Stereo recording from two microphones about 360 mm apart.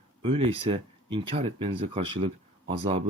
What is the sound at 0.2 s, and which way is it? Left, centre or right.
Speech, centre.